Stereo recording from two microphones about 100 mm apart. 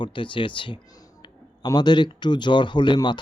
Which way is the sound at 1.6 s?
45° left (ahead or behind).